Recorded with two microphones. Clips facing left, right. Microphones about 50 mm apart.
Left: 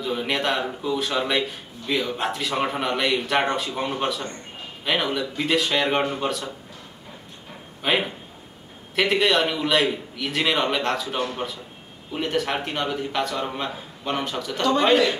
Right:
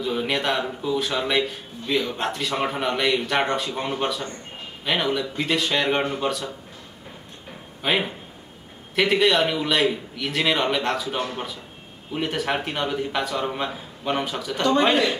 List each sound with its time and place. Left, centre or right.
0.0 s a man's voice: centre
7.8 s a man's voice: centre